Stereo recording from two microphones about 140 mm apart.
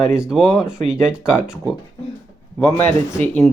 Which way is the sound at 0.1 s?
5° right (ahead or behind).